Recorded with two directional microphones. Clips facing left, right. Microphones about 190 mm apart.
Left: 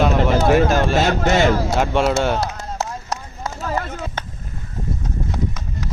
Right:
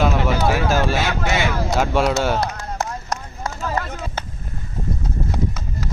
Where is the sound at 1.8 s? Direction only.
Centre (ahead or behind).